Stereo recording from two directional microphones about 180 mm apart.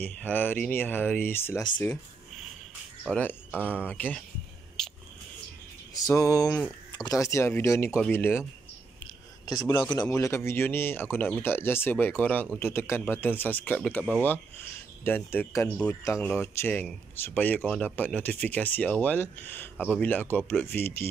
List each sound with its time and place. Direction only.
0.0 s speech: 10° left (ahead or behind)
3.1 s speech: 10° left (ahead or behind)
3.5 s speech: 5° right (ahead or behind)
3.8 s speech: 10° left (ahead or behind)
4.8 s a sound: 5° left (ahead or behind)
6.0 s speech: 15° left (ahead or behind)
9.5 s speech: 15° left (ahead or behind)